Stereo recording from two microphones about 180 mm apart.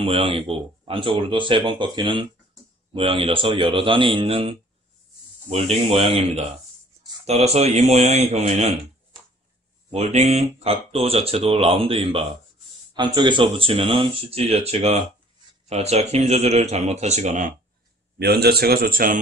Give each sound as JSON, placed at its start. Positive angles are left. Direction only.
{"t": 0.0, "sound": "speech", "side_deg": -30}
{"t": 9.8, "sound": "speech", "side_deg": -40}
{"t": 18.2, "sound": "a man's voice", "side_deg": -60}